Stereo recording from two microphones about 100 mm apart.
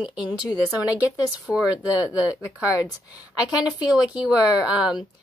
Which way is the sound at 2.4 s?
35° left (ahead or behind).